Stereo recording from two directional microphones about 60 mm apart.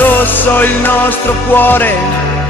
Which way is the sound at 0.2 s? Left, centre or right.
Left.